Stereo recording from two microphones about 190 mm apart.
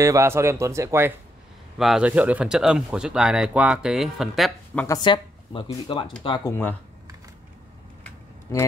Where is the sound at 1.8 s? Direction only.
5° right (ahead or behind).